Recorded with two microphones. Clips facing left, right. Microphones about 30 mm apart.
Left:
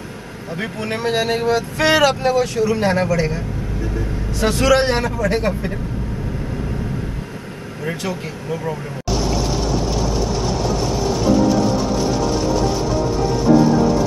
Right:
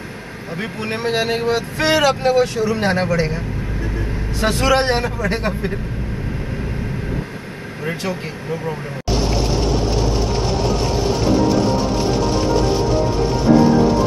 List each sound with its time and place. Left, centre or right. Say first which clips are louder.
0.9 s a man's voice: even; right
4.6 s a man's voice: left 1 dB; centre
8.0 s speech: right 1 dB; centre